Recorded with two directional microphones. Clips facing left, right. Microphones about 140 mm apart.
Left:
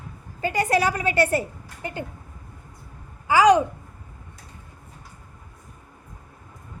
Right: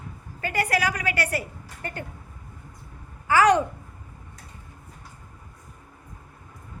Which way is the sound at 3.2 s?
15° left (ahead or behind).